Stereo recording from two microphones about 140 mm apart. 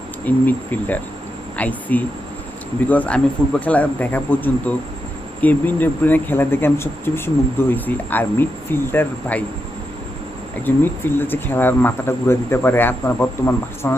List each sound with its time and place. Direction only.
0.3 s speech: 10° left (ahead or behind)
10.7 s speech: 15° left (ahead or behind)